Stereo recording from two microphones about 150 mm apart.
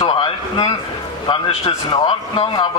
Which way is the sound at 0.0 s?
35° left (ahead or behind).